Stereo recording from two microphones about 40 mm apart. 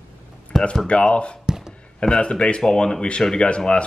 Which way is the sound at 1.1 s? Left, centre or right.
Left.